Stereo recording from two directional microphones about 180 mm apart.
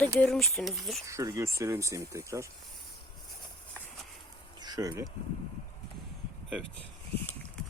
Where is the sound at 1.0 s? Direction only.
15° right (ahead or behind).